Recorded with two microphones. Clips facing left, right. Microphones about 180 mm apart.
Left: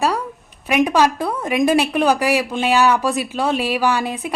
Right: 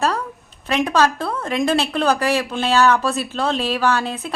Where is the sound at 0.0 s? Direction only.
10° left (ahead or behind).